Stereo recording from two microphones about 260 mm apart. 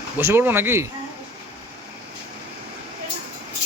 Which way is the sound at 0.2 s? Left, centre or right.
Centre.